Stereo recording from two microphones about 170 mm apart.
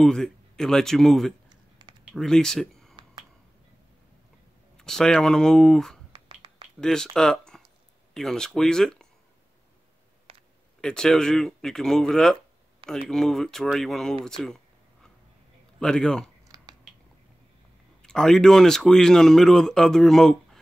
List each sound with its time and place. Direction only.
0.0 s speech: 5° left (ahead or behind)
1.5 s a sound: 25° right (ahead or behind)
2.0 s speech: centre (ahead or behind)
4.7 s speech: 5° left (ahead or behind)
6.1 s finger snapping: 30° right (ahead or behind)
6.8 s speech: 5° left (ahead or behind)
10.3 s a sound: 30° right (ahead or behind)
10.8 s speech: 5° left (ahead or behind)
15.8 s speech: 5° left (ahead or behind)
16.4 s a sound: 20° right (ahead or behind)
18.0 s speech: 5° left (ahead or behind)